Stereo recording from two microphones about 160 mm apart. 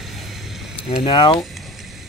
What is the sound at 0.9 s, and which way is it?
Speech, 35° left (ahead or behind).